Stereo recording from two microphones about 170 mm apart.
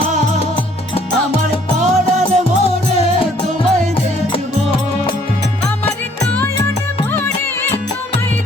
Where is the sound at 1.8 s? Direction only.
45° right (ahead or behind).